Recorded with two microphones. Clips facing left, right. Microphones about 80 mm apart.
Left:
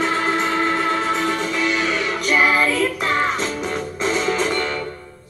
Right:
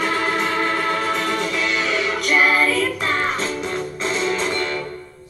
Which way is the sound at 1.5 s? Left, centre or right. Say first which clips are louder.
Left 1 dB; centre.